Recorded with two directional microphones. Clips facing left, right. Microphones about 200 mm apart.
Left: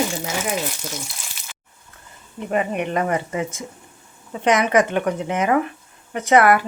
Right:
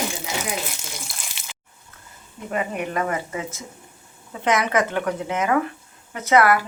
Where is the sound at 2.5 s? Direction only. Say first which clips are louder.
Left 4 dB; 20° left (ahead or behind).